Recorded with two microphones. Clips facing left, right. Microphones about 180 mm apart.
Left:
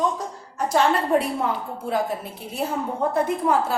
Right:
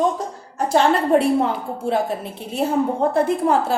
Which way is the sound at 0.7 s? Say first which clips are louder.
Right 4 dB; 30° right (ahead or behind).